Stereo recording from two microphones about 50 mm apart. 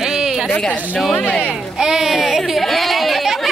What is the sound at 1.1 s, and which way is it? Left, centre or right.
Speech, centre.